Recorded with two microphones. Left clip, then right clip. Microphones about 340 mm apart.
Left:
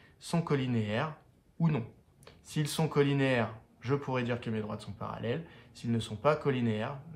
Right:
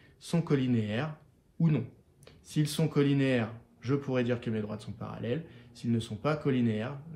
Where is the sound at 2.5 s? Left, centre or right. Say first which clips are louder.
Even; centre.